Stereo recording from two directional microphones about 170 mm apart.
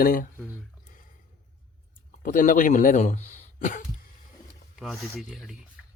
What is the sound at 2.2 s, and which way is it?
Speech, 50° left (ahead or behind).